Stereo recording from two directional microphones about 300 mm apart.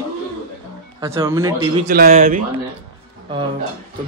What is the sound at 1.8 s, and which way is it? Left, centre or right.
Speech, right.